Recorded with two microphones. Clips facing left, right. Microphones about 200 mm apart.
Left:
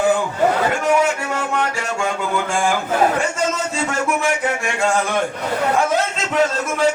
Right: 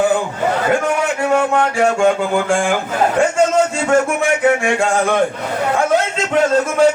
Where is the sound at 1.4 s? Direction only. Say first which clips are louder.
Right 7 dB; 55° right (ahead or behind).